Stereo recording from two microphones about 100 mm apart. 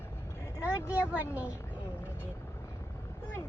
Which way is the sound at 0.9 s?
15° right (ahead or behind).